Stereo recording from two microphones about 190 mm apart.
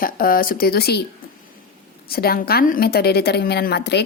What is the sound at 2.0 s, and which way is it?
Speech, 55° left (ahead or behind).